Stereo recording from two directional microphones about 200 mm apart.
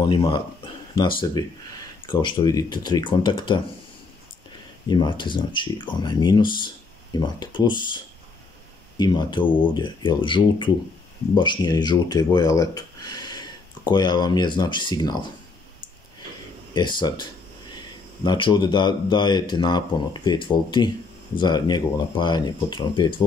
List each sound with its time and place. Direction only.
0.0 s speech: 20° left (ahead or behind)
4.8 s speech: 20° left (ahead or behind)
16.7 s speech: 20° left (ahead or behind)